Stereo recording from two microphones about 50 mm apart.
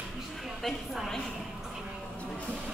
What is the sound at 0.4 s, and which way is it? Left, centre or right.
Speech, centre.